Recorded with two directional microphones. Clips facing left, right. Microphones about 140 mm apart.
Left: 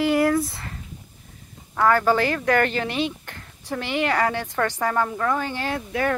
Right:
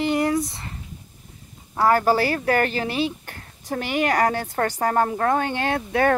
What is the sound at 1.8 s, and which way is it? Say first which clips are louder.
A woman's voice: right 1 dB; 35° right (ahead or behind).